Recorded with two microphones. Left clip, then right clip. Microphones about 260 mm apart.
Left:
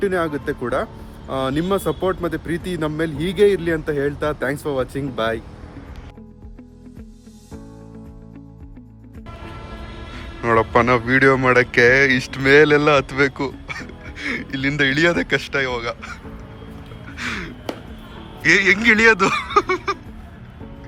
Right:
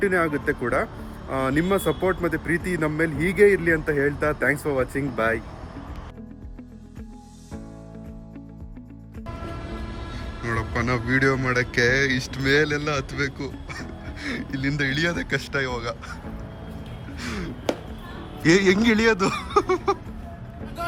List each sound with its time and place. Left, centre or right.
0.0 s speech: centre
10.4 s speech: centre
17.2 s music: centre
18.4 s a man's voice: centre